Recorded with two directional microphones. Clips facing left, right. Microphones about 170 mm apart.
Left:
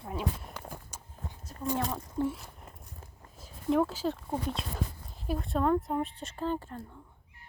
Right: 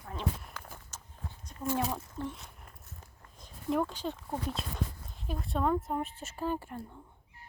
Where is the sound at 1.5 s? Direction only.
40° left (ahead or behind).